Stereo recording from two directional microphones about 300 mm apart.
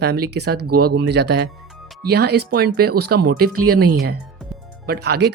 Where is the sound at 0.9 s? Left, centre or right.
Right.